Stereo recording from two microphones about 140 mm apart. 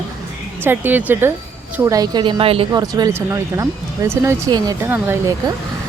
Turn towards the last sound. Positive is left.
turn(degrees=-15)  # may be behind; listen again after turning